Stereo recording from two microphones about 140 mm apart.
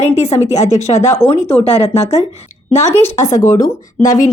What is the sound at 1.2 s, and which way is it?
Speech, 5° right (ahead or behind).